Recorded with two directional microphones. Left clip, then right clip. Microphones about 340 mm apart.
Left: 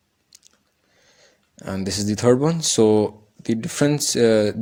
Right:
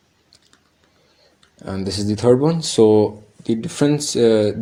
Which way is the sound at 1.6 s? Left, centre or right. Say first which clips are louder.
Right 1 dB; left.